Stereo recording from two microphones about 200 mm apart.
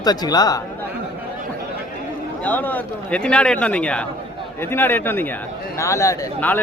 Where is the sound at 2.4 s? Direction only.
10° left (ahead or behind).